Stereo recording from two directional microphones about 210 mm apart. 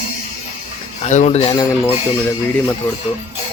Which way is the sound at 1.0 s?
35° left (ahead or behind).